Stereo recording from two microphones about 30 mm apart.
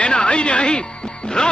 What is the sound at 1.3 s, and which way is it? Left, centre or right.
Music, left.